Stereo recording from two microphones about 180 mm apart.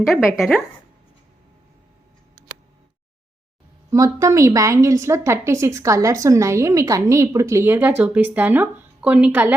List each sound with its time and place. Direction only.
0.1 s speech: centre (ahead or behind)
3.8 s a woman's voice: 15° right (ahead or behind)